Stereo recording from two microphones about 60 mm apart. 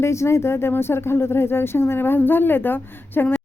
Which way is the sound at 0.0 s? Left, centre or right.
Left.